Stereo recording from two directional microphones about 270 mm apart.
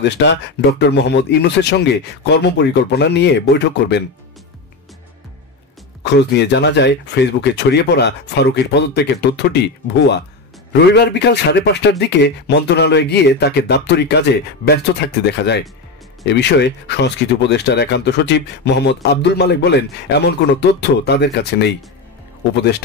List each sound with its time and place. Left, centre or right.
0.0 s a man's voice: left
6.1 s a man's voice: left